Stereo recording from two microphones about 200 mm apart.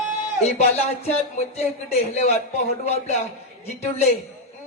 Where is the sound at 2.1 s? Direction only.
30° left (ahead or behind).